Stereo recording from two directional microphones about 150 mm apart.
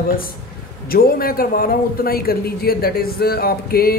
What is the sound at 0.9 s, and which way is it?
A man's voice, 80° left.